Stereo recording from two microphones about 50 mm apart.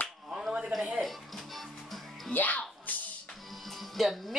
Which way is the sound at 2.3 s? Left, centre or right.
Left.